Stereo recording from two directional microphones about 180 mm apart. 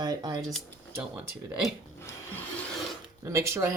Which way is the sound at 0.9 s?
15° right (ahead or behind).